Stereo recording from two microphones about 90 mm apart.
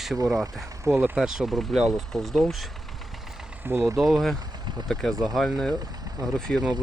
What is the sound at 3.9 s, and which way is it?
Speech, centre (ahead or behind).